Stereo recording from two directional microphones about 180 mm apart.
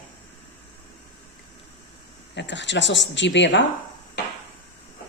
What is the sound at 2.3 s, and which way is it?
Speech, 80° left.